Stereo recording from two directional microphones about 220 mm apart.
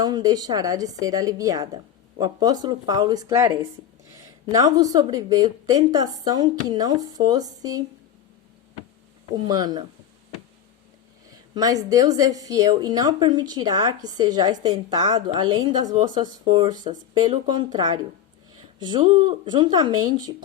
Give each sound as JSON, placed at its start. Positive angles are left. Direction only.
{"t": 0.0, "sound": "speech", "side_deg": -20}
{"t": 9.3, "sound": "speech", "side_deg": -15}
{"t": 11.5, "sound": "speech", "side_deg": -15}